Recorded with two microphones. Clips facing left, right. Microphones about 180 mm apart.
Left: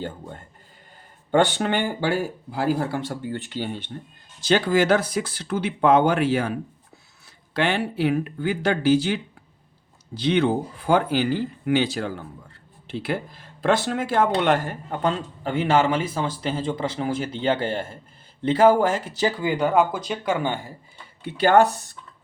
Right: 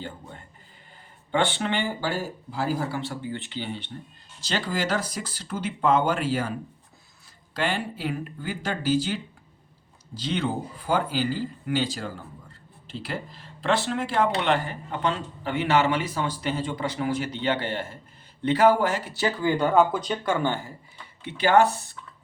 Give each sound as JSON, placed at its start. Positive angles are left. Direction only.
{"t": 0.0, "sound": "speech", "side_deg": 50}
{"t": 4.4, "sound": "speech", "side_deg": 60}
{"t": 7.5, "sound": "speech", "side_deg": 70}
{"t": 19.5, "sound": "speech", "side_deg": 15}